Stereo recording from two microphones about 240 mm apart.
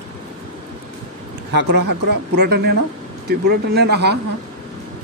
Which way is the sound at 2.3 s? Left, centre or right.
Right.